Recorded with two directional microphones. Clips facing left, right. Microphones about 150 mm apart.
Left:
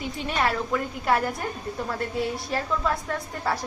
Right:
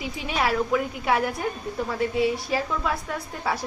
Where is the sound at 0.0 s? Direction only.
5° right (ahead or behind).